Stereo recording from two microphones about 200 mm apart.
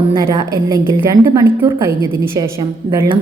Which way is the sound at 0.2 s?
15° right (ahead or behind).